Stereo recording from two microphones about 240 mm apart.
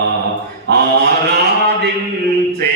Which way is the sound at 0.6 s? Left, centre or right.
Right.